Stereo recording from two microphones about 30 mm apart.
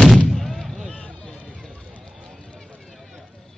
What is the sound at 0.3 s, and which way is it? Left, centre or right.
Artillery fire, centre.